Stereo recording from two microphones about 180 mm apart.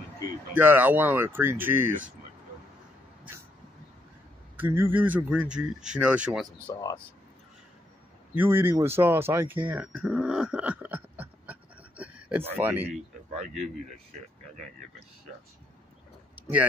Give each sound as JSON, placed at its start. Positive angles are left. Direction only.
{"t": 0.6, "sound": "speech", "side_deg": -10}
{"t": 4.6, "sound": "speech", "side_deg": -10}
{"t": 6.7, "sound": "speech", "side_deg": 20}
{"t": 8.4, "sound": "speech", "side_deg": -15}
{"t": 12.0, "sound": "a sound", "side_deg": -10}
{"t": 16.3, "sound": "a sound", "side_deg": -10}